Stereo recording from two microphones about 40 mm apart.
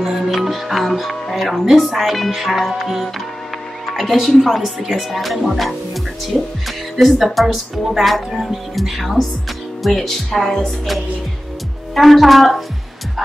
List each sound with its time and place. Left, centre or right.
0.0 s speech: centre
6.3 s speech: centre
7.0 s speech: centre